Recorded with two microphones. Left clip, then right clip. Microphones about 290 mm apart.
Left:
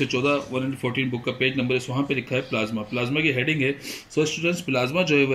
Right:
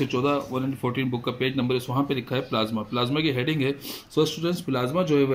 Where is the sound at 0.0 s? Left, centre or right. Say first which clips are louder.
Left 2 dB; centre.